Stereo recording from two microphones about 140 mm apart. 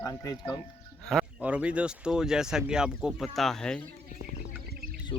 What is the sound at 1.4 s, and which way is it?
Speech, 10° right (ahead or behind).